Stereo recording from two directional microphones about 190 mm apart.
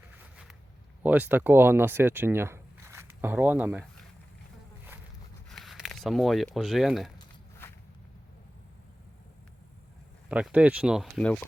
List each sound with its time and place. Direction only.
1.0 s speech: 10° right (ahead or behind)
5.5 s speech: centre (ahead or behind)
7.6 s walk: 10° left (ahead or behind)
10.2 s speech: 5° right (ahead or behind)